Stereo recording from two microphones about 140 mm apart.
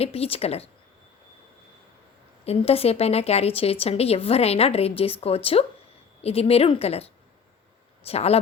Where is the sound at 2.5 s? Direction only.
45° left (ahead or behind).